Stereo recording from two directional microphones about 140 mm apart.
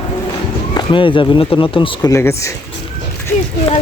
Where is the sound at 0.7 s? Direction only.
35° left (ahead or behind).